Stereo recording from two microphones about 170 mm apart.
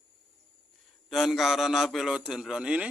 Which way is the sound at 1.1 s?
Centre (ahead or behind).